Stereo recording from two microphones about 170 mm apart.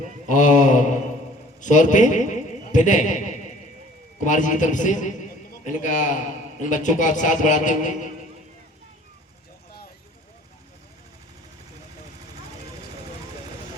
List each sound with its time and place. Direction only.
0.3 s a man's voice: 45° left (ahead or behind)